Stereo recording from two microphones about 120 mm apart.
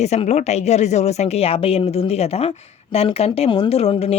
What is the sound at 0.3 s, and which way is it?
Speech, 65° left (ahead or behind).